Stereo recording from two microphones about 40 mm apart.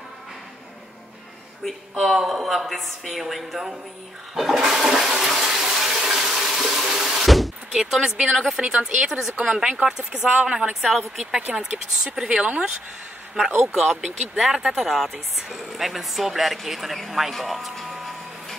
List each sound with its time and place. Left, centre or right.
2.0 s speech: centre
4.4 s toilet flush: centre
7.2 s a sound: centre
7.9 s speech: centre
10.8 s speech: centre
11.5 s speech: centre
13.3 s speech: centre